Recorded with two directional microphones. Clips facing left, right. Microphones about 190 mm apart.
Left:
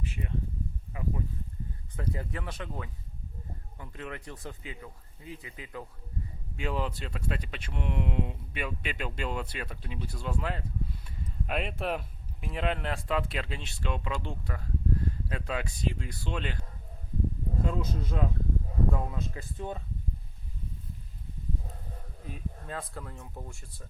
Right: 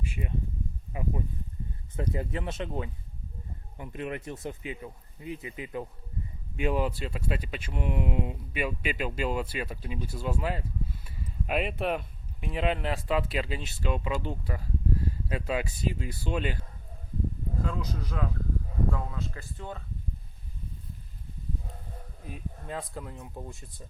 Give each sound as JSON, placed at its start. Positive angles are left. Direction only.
{"t": 0.0, "sound": "a sound", "side_deg": -15}
{"t": 0.9, "sound": "speech", "side_deg": -20}
{"t": 17.7, "sound": "speech", "side_deg": 25}
{"t": 22.6, "sound": "speech", "side_deg": -15}